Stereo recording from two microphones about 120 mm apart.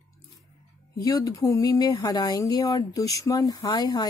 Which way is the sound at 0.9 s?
30° left (ahead or behind).